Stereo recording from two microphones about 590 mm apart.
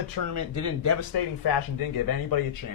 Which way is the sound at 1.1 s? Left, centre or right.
Left.